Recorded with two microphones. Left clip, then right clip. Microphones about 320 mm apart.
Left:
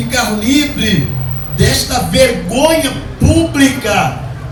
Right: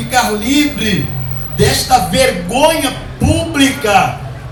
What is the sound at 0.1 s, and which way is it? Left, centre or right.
Speech, centre.